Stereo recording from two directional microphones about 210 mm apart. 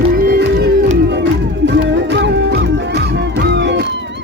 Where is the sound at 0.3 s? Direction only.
50° right (ahead or behind).